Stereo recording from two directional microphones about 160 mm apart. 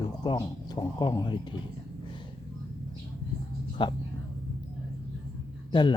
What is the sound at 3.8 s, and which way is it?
Speech, 30° left (ahead or behind).